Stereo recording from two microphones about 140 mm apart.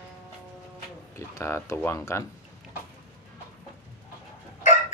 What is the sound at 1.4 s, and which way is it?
Speech, 20° left (ahead or behind).